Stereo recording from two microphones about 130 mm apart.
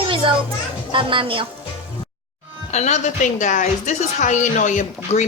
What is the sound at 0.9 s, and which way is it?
Speech, 40° right (ahead or behind).